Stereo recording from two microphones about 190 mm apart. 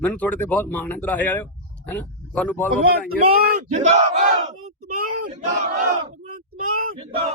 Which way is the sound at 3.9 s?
40° right (ahead or behind).